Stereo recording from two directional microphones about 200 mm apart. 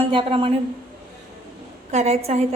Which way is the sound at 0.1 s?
25° right (ahead or behind).